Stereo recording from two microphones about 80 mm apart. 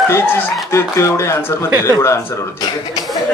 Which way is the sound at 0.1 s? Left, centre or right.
Left.